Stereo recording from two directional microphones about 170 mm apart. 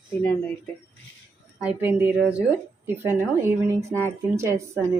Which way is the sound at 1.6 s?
10° right (ahead or behind).